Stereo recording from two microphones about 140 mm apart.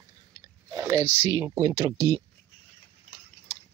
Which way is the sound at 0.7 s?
20° right (ahead or behind).